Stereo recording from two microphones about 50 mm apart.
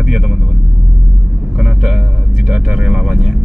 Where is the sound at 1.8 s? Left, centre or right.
Centre.